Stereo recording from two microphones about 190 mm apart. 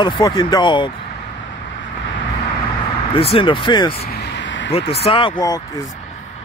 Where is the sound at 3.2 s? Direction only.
30° left (ahead or behind).